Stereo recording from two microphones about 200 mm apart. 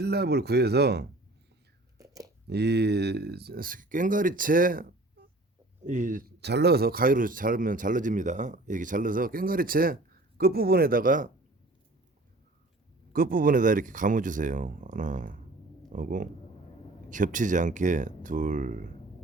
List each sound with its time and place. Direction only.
0.0 s speech: 55° right (ahead or behind)
2.0 s a sound: 15° right (ahead or behind)
2.5 s a man's voice: 55° right (ahead or behind)
13.1 s speech: 45° right (ahead or behind)